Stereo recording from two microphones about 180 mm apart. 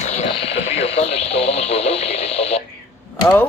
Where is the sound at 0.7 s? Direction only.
35° left (ahead or behind).